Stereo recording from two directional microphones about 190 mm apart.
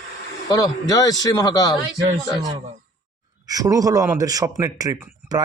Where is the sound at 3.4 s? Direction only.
20° right (ahead or behind).